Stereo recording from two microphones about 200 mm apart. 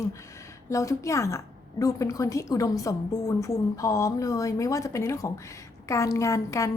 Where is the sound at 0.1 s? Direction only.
15° left (ahead or behind).